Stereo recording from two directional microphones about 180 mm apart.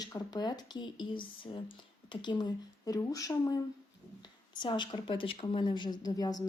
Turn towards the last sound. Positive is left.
turn(degrees=20)  # may be behind; listen again after turning